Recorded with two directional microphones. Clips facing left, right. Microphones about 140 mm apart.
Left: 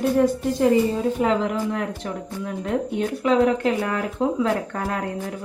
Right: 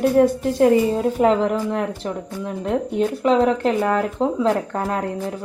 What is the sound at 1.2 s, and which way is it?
Speech, 40° right (ahead or behind).